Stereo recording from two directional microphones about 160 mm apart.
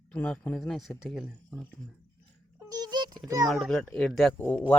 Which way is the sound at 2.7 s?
25° right (ahead or behind).